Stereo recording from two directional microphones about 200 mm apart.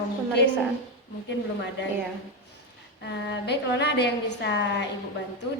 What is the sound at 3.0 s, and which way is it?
A woman's voice, 60° left (ahead or behind).